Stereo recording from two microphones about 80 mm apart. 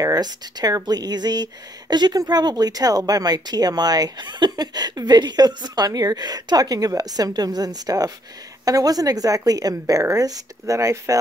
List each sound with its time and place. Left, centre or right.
0.0 s a woman's voice: right